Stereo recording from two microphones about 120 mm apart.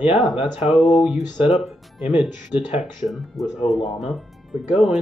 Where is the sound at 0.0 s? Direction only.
5° right (ahead or behind).